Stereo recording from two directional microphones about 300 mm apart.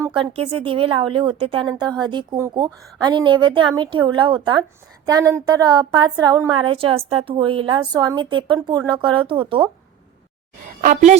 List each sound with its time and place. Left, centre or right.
0.0 s a woman's voice: centre
10.8 s a woman's voice: right